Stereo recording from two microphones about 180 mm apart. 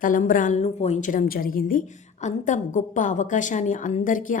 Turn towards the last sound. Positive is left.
turn(degrees=45)  # may be behind; listen again after turning